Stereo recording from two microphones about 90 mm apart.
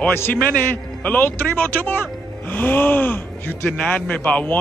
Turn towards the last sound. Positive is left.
turn(degrees=15)  # may be behind; listen again after turning